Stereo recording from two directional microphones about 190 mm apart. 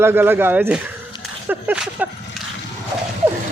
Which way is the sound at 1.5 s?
5° right (ahead or behind).